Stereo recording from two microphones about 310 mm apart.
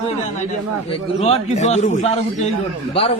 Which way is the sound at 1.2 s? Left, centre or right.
Left.